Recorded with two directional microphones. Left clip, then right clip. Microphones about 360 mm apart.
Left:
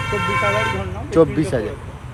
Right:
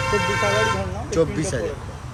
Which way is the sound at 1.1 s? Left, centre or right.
Centre.